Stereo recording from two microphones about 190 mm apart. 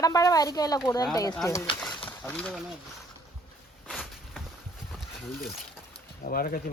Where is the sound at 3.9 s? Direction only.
Centre (ahead or behind).